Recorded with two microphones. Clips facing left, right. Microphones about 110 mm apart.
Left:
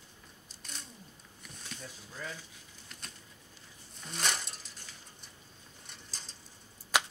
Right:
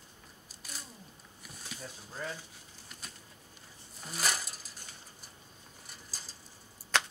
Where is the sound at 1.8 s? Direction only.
35° right (ahead or behind).